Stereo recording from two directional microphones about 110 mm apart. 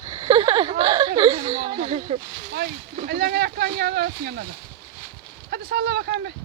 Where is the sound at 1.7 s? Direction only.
55° right (ahead or behind).